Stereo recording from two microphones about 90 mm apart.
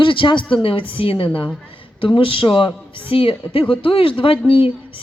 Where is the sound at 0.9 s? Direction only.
80° left.